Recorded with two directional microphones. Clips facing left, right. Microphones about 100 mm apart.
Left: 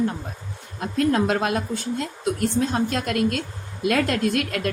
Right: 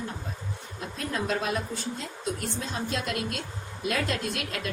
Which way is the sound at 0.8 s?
65° left (ahead or behind).